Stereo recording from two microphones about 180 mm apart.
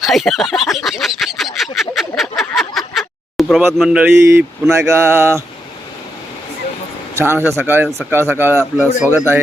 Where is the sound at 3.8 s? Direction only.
5° right (ahead or behind).